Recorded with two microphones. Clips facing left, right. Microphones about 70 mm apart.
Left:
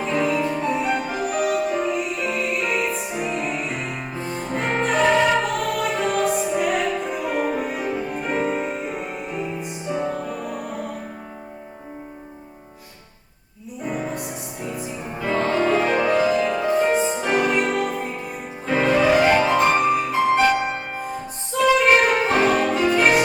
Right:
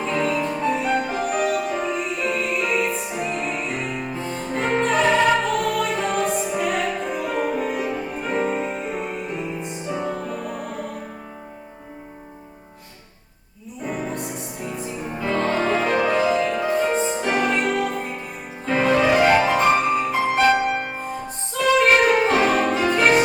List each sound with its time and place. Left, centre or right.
0.0 s music: centre
0.8 s music: left
1.0 s music: centre
13.8 s music: centre
22.0 s saxophone: centre
22.5 s music: centre